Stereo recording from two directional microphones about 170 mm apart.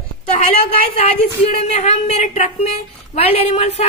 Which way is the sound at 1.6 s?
40° left (ahead or behind).